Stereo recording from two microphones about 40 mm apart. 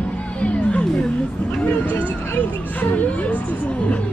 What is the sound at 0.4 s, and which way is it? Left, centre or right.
Chatter, left.